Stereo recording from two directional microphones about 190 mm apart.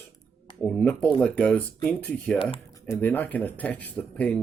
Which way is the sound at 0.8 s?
5° left (ahead or behind).